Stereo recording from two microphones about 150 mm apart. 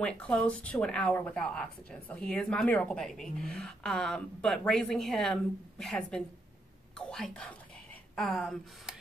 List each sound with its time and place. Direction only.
0.0 s speech: 5° left (ahead or behind)